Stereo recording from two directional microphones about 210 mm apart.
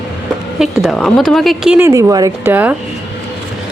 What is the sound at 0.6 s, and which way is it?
A woman's voice, centre (ahead or behind).